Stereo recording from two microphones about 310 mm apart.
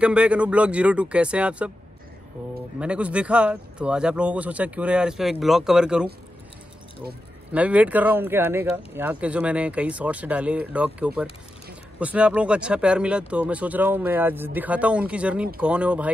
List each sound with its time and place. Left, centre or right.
0.0 s speech: centre
2.8 s speech: centre
7.5 s speech: centre